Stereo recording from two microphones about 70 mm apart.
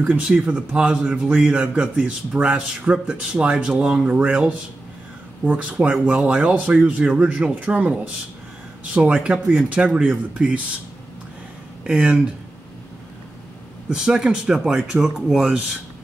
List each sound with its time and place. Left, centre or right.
0.2 s a man's voice: centre
8.9 s a man's voice: centre
11.8 s speech: centre
13.8 s a man's voice: centre